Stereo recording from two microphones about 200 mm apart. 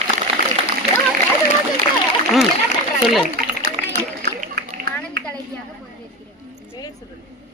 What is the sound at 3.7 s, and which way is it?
Run, 45° right (ahead or behind).